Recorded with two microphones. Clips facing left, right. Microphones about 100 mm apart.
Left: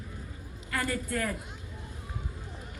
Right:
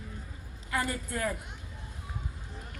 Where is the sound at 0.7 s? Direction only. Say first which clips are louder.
Left 1 dB; 20° right (ahead or behind).